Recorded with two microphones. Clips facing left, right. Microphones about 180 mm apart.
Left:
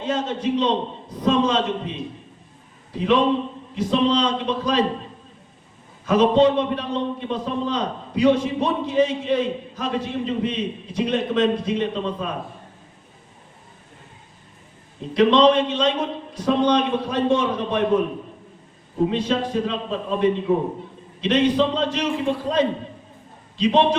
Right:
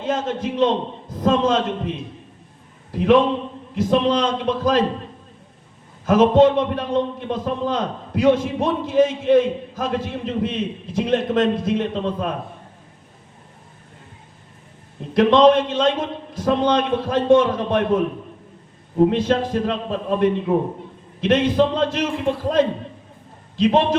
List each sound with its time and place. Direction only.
0.0 s a man's voice: 50° right (ahead or behind)
2.9 s a man's voice: 55° right (ahead or behind)
6.1 s a man's voice: 50° right (ahead or behind)
15.1 s a man's voice: 50° right (ahead or behind)